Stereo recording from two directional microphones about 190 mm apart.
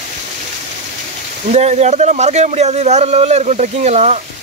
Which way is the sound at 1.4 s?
35° right (ahead or behind).